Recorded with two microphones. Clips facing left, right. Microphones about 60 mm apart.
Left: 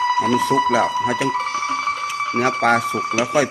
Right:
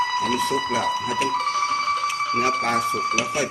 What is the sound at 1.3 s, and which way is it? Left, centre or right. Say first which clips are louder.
Music: left 1 dB; left.